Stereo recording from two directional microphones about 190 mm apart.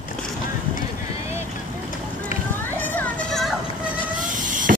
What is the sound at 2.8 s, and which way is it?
Vehicle, 10° left (ahead or behind).